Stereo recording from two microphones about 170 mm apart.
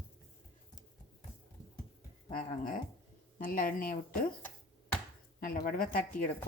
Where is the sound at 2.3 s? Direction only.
55° left (ahead or behind).